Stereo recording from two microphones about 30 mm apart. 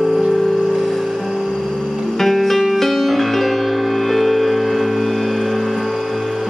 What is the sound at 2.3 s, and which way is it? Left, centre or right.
Music, centre.